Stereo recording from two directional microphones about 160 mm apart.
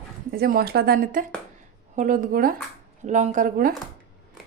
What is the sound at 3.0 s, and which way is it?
Speech, 50° right (ahead or behind).